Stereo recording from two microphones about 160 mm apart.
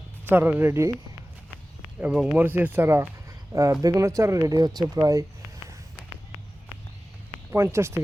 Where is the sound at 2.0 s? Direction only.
5° right (ahead or behind).